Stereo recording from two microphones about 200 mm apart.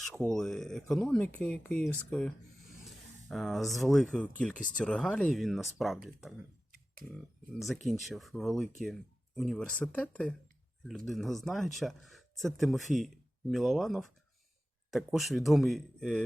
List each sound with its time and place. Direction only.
0.0 s speech: 5° left (ahead or behind)
7.6 s speech: centre (ahead or behind)